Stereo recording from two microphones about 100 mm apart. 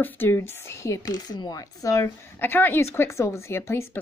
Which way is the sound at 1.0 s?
40° left (ahead or behind).